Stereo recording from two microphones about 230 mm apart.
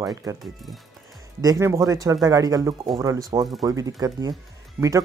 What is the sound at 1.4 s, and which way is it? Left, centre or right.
Speech, centre.